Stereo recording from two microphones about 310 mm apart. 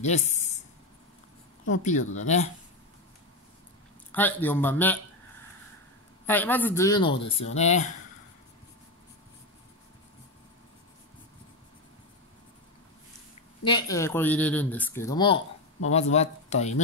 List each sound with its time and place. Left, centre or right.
0.0 s speech: left
1.7 s speech: left
4.1 s speech: centre
6.2 s speech: centre; by 7.9 s left
13.7 s speech: centre